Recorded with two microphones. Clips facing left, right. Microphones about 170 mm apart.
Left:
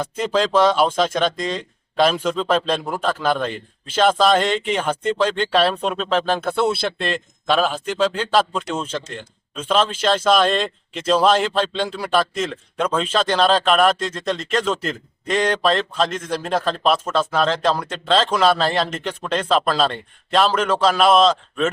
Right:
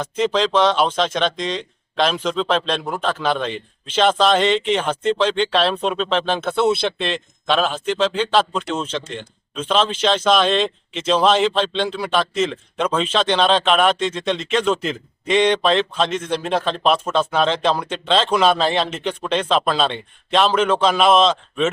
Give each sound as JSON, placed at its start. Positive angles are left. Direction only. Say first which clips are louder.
{"t": 0.0, "sound": "a man's voice", "louder": "right 1 dB", "side_deg": 5}